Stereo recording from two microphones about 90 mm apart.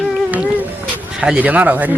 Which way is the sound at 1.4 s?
15° right (ahead or behind).